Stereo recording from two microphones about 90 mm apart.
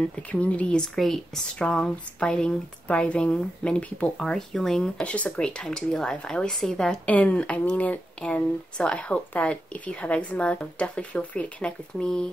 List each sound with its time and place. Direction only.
0.0 s speech: 10° left (ahead or behind)